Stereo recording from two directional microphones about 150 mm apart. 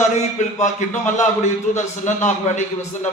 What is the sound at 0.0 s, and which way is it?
A man's voice, 55° left (ahead or behind).